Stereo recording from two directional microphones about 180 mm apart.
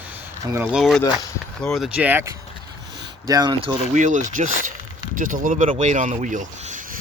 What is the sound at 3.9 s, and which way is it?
Speech, 45° right (ahead or behind).